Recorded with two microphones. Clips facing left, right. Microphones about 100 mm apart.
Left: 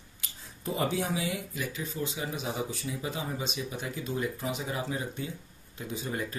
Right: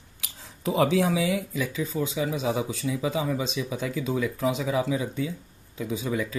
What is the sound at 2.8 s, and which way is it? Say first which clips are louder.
Speech: right 8 dB; 75° right (ahead or behind).